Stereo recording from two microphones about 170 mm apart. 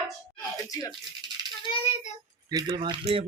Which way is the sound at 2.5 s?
25° right (ahead or behind).